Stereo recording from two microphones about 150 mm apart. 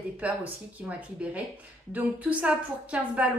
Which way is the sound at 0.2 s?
10° right (ahead or behind).